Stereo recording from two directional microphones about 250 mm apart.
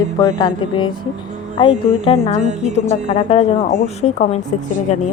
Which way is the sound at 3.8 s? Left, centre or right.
Left.